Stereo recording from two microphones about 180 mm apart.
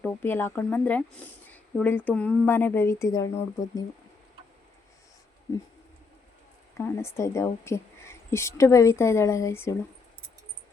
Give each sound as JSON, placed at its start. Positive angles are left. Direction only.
{"t": 0.0, "sound": "speech", "side_deg": 10}
{"t": 5.5, "sound": "speech", "side_deg": 15}
{"t": 6.7, "sound": "speech", "side_deg": 15}